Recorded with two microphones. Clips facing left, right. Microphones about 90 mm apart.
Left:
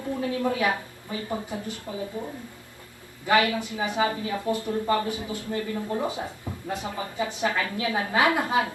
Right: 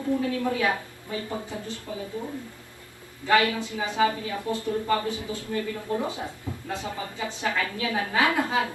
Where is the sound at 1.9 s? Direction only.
25° left (ahead or behind).